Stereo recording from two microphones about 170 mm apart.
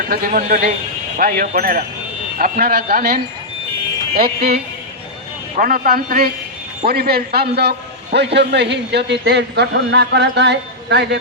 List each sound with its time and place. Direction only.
0.1 s a man's voice: 55° right (ahead or behind)
5.5 s a man's voice: 55° right (ahead or behind); by 11.2 s 85° right